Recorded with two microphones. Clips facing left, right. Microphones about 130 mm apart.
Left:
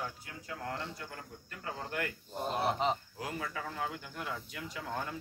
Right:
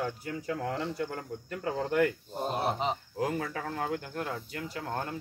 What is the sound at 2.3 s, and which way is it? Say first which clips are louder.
Speech: right 1 dB; 25° right (ahead or behind).